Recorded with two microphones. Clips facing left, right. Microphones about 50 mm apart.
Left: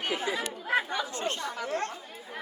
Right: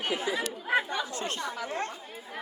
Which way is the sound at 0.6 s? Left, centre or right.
Centre.